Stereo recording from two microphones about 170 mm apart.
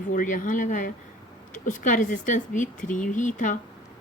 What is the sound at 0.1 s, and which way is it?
Speech, 50° left (ahead or behind).